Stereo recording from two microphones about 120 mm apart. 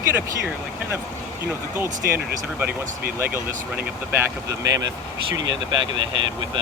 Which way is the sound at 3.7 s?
15° right (ahead or behind).